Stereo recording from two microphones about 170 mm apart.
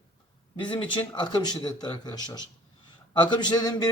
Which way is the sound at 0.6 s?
30° left (ahead or behind).